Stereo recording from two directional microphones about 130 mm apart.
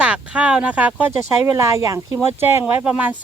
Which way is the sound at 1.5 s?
20° right (ahead or behind).